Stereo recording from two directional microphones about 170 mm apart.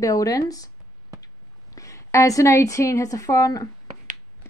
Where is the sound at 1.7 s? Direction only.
20° left (ahead or behind).